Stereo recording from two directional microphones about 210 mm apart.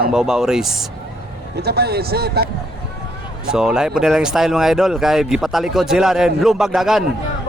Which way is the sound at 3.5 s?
5° right (ahead or behind).